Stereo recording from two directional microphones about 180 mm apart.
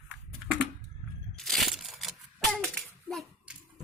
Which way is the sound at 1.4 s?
Centre (ahead or behind).